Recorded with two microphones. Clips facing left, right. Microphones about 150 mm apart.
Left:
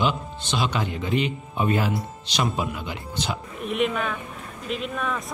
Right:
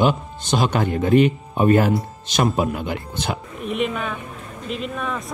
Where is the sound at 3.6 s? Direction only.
Centre (ahead or behind).